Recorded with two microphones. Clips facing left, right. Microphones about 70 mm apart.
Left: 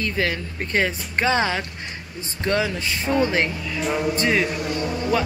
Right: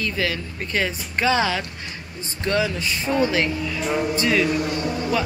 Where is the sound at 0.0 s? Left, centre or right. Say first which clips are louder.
Left 1 dB; left.